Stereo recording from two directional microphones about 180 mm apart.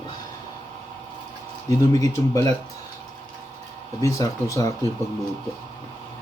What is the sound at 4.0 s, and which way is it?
Speech, 15° left (ahead or behind).